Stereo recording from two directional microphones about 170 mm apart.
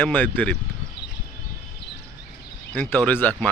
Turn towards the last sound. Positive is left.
turn(degrees=10)  # may be behind; listen again after turning